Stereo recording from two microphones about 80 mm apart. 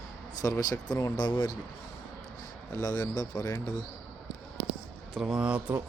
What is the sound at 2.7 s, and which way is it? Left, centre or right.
Speech, left.